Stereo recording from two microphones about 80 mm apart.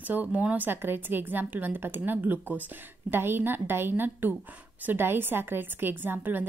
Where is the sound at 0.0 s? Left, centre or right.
Right.